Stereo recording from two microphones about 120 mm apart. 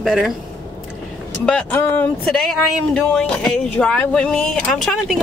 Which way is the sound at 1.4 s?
10° left (ahead or behind).